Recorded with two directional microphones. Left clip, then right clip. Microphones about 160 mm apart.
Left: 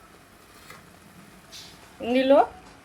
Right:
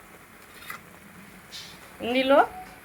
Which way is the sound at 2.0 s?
10° left (ahead or behind).